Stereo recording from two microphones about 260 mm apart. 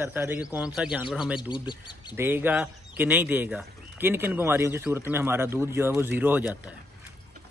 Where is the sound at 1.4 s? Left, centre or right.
Centre.